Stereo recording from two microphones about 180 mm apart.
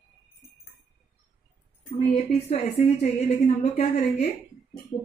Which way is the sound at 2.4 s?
35° left (ahead or behind).